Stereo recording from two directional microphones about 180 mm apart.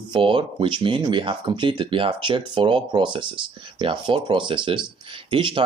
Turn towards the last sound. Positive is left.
turn(degrees=-30)  # may be behind; listen again after turning